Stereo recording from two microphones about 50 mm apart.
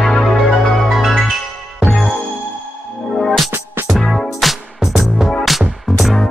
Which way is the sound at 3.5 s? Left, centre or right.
Right.